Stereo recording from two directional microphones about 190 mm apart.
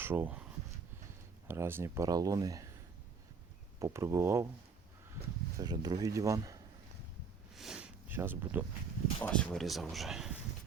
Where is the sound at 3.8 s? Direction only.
15° right (ahead or behind).